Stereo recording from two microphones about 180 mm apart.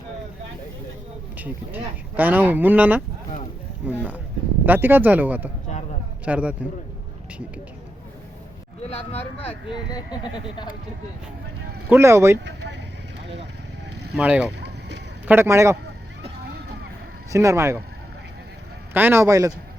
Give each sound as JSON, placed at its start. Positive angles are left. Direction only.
{"t": 1.4, "sound": "speech", "side_deg": -10}
{"t": 5.6, "sound": "a sound", "side_deg": 40}
{"t": 6.2, "sound": "speech", "side_deg": -5}
{"t": 8.8, "sound": "speech", "side_deg": 35}
{"t": 11.9, "sound": "speech", "side_deg": -15}
{"t": 14.2, "sound": "speech", "side_deg": -5}
{"t": 17.3, "sound": "speech", "side_deg": -15}
{"t": 18.9, "sound": "speech", "side_deg": -10}